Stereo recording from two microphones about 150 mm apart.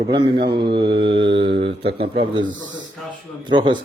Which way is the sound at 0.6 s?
90° right.